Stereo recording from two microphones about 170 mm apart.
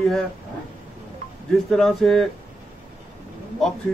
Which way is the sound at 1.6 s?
Centre (ahead or behind).